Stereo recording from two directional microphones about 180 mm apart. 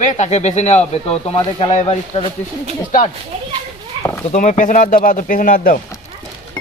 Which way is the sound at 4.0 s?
30° right (ahead or behind).